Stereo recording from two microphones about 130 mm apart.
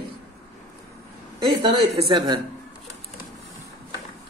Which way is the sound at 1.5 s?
40° right (ahead or behind).